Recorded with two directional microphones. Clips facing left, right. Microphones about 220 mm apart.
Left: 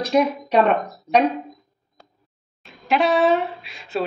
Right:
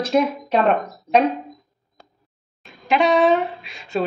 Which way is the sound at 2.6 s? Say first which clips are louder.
Right 1 dB; centre (ahead or behind).